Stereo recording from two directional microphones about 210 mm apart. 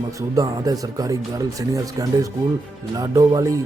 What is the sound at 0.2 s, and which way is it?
Speech, 15° right (ahead or behind).